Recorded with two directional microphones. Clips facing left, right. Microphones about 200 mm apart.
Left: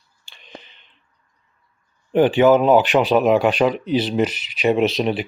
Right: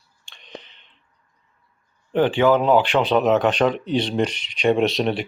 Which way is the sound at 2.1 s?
15° left (ahead or behind).